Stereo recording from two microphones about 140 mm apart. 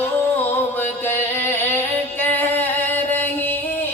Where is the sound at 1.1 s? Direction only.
15° left (ahead or behind).